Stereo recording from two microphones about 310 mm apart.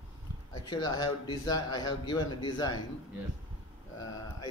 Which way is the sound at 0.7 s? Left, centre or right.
Centre.